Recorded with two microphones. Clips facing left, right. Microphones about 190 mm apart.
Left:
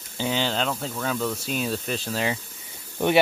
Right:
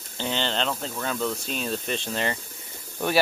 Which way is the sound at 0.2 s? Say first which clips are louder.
Left 2 dB; 10° left (ahead or behind).